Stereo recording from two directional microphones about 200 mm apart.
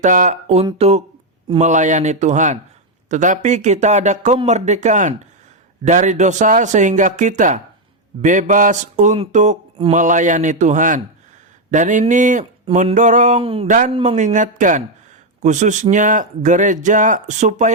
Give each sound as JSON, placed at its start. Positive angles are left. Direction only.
{"t": 0.0, "sound": "speech", "side_deg": -40}
{"t": 13.4, "sound": "speech", "side_deg": -25}
{"t": 13.7, "sound": "speech", "side_deg": -40}
{"t": 13.9, "sound": "speech", "side_deg": -25}
{"t": 14.2, "sound": "speech", "side_deg": -40}